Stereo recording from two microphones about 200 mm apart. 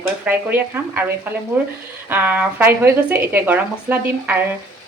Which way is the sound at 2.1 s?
10° right (ahead or behind).